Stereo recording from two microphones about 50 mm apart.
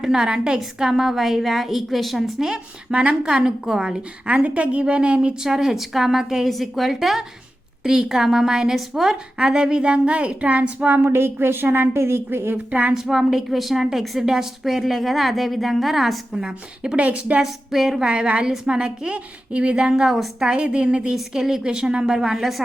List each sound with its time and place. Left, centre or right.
0.0 s a woman's voice: centre
2.5 s a woman's voice: centre
6.5 s a woman's voice: centre; by 10.8 s right
10.8 s speech: right
12.9 s a woman's voice: centre
17.0 s a woman's voice: right
17.4 s a woman's voice: centre
18.0 s a woman's voice: right
21.2 s a woman's voice: centre